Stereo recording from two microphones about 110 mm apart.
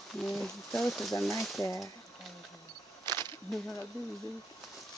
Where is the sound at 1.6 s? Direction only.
30° left (ahead or behind).